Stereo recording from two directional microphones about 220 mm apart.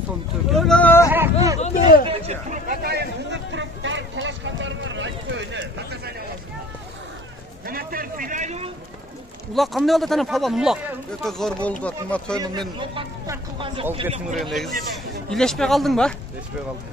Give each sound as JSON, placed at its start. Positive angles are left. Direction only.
{"t": 0.5, "sound": "speech", "side_deg": 0}
{"t": 1.1, "sound": "hubbub", "side_deg": -10}
{"t": 1.6, "sound": "a sound", "side_deg": 40}
{"t": 2.0, "sound": "a sound", "side_deg": -30}
{"t": 2.8, "sound": "a sound", "side_deg": -45}
{"t": 7.6, "sound": "a man's voice", "side_deg": -40}
{"t": 9.5, "sound": "speech", "side_deg": 0}
{"t": 12.4, "sound": "speech", "side_deg": -20}
{"t": 14.3, "sound": "a man's voice", "side_deg": 0}